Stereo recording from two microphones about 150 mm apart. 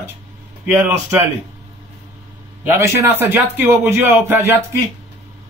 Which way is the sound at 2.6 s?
15° right (ahead or behind).